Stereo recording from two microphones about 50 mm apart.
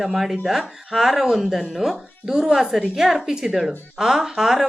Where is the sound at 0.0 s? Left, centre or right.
Centre.